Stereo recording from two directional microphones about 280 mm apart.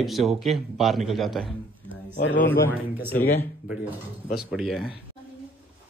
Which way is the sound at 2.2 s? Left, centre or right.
Left.